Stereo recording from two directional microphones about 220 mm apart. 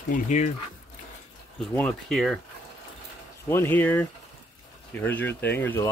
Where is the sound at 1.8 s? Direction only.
5° left (ahead or behind).